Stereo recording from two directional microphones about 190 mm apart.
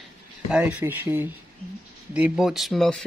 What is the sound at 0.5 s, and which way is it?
Speech, 5° right (ahead or behind).